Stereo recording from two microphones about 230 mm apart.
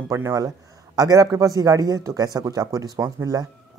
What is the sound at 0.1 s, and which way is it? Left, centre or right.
A man's voice, centre.